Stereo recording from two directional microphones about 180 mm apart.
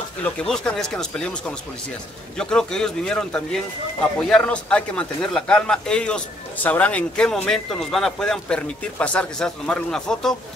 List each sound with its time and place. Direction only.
0.2 s speech: 5° left (ahead or behind)